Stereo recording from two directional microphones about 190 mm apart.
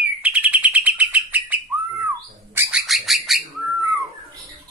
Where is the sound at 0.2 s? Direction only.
10° right (ahead or behind).